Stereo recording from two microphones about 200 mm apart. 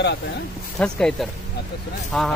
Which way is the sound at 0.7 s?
5° left (ahead or behind).